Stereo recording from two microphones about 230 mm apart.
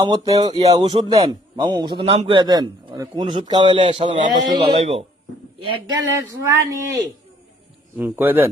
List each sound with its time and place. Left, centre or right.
0.0 s speech: centre
0.7 s a man's voice: right
7.9 s speech: centre